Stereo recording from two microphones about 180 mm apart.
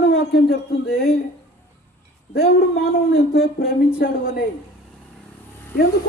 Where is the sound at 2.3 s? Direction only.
65° left (ahead or behind).